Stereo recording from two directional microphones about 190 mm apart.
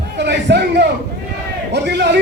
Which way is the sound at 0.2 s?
60° right (ahead or behind).